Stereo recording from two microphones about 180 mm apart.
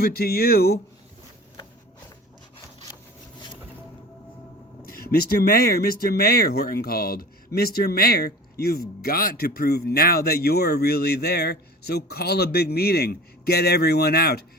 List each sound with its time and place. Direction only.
0.0 s speech: 60° left (ahead or behind)
4.9 s speech: 55° left (ahead or behind)